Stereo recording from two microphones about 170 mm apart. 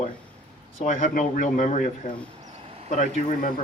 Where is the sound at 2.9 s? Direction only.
50° left (ahead or behind).